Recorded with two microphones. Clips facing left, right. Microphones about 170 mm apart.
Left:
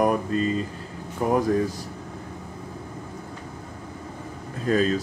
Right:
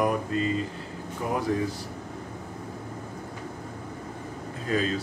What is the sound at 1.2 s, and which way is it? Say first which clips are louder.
Speech: left 7 dB; 45° left (ahead or behind).